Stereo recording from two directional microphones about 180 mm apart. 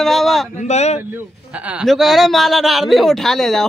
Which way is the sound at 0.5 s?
40° left (ahead or behind).